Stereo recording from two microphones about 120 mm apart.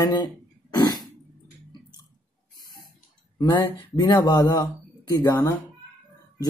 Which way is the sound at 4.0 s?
35° left (ahead or behind).